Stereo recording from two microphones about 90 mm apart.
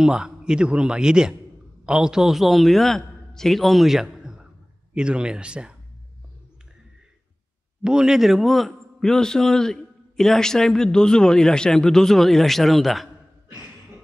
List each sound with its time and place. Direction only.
0.0 s a man's voice: 10° right (ahead or behind)
7.8 s a man's voice: 10° right (ahead or behind)